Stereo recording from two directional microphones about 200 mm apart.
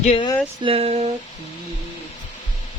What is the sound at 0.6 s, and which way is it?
Speech, 30° right (ahead or behind).